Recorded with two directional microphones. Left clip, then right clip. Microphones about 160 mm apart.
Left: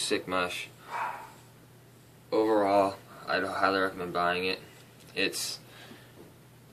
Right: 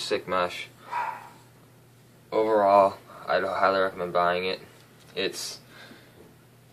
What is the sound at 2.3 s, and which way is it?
Speech, 15° left (ahead or behind).